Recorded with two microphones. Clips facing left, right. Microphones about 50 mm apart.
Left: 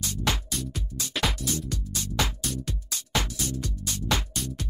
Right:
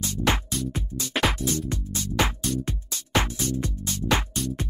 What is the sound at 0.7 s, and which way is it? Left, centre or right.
Music, right.